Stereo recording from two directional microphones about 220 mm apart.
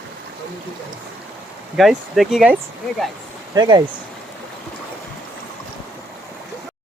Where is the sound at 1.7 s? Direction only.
Centre (ahead or behind).